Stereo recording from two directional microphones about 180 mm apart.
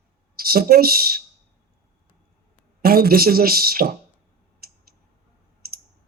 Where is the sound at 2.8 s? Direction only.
55° right (ahead or behind).